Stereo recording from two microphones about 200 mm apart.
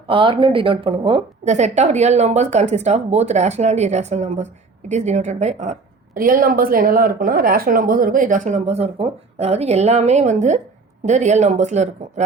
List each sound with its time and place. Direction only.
0.1 s a woman's voice: 25° right (ahead or behind)
6.1 s a woman's voice: 45° right (ahead or behind)